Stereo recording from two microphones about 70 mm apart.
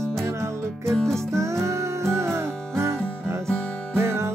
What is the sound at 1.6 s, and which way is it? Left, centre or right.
Music, right.